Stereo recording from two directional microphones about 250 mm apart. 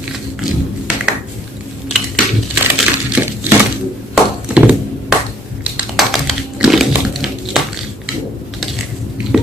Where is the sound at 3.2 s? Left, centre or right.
Centre.